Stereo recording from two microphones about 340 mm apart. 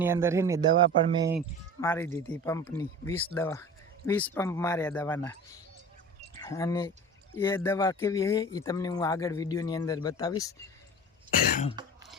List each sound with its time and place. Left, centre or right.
0.0 s speech: centre
1.8 s speech: centre
11.8 s cough: centre